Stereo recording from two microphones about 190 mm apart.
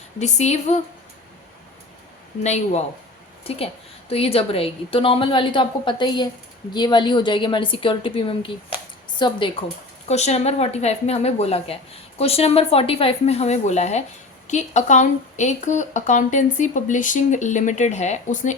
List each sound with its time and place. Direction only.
0.2 s speech: 35° left (ahead or behind)
2.4 s a woman's voice: 35° left (ahead or behind)
10.1 s speech: 35° left (ahead or behind)